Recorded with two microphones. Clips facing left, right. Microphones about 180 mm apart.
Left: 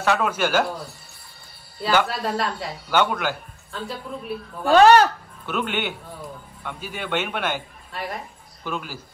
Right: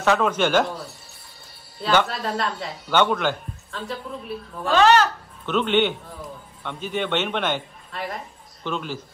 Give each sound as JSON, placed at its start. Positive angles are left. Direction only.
{"t": 0.0, "sound": "a man's voice", "side_deg": 5}
{"t": 1.8, "sound": "speech", "side_deg": 5}
{"t": 4.6, "sound": "speech", "side_deg": 50}
{"t": 5.5, "sound": "a man's voice", "side_deg": 10}